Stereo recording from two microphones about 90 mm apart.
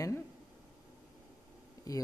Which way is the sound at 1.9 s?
40° left (ahead or behind).